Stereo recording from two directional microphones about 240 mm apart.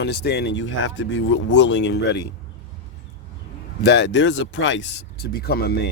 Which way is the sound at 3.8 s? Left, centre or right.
Left.